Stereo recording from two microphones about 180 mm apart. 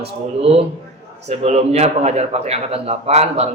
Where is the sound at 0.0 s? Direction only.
35° right (ahead or behind).